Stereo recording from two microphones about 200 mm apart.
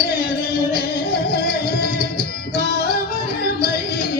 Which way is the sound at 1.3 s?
50° left (ahead or behind).